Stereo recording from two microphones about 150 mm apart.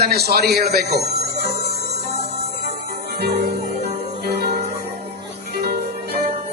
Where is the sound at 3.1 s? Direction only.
90° right.